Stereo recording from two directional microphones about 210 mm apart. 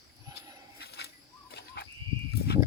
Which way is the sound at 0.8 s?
50° left (ahead or behind).